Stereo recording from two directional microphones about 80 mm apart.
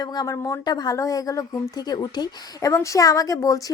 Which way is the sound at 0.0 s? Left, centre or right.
Left.